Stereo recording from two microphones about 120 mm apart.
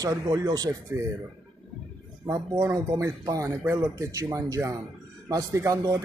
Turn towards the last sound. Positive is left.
turn(degrees=-25)  # may be behind; listen again after turning